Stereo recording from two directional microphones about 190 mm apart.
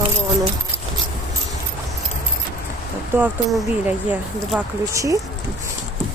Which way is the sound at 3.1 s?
10° right (ahead or behind).